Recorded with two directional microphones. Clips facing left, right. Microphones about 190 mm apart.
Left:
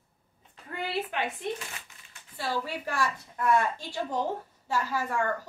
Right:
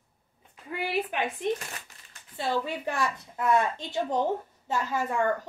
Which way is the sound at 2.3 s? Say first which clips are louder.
Right 3 dB; 20° right (ahead or behind).